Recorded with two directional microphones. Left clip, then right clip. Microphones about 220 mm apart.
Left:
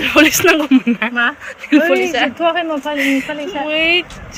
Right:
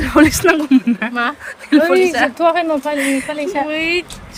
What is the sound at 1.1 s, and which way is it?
Speech, 55° right (ahead or behind).